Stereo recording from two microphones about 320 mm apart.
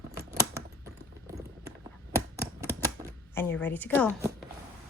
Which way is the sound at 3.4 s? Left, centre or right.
Centre.